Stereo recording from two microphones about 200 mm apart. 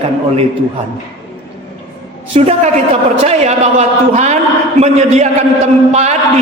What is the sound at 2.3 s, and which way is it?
A man's voice, 30° right (ahead or behind).